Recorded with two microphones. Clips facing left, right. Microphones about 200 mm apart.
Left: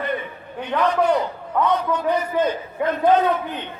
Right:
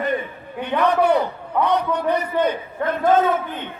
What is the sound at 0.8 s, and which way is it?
A man's voice, 60° right (ahead or behind).